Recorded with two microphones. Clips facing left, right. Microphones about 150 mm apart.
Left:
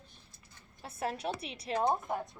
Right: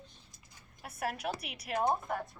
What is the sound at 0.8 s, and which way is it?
A woman's voice, 25° left (ahead or behind).